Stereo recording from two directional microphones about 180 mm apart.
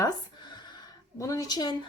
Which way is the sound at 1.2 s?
20° left (ahead or behind).